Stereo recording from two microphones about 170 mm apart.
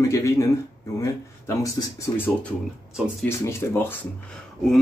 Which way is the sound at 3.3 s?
15° left (ahead or behind).